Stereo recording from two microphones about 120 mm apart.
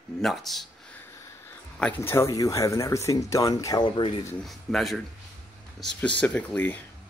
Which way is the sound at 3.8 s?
45° left (ahead or behind).